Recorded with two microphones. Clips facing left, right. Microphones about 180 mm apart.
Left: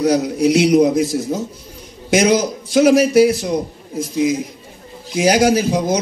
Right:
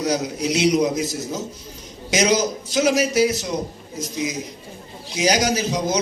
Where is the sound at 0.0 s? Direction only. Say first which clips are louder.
Left 8 dB; 60° left (ahead or behind).